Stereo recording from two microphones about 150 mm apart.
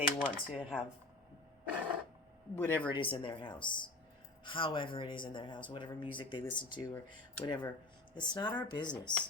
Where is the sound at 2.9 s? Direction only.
35° left (ahead or behind).